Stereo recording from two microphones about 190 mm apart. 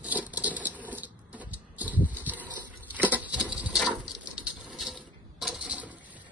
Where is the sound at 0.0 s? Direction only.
5° right (ahead or behind).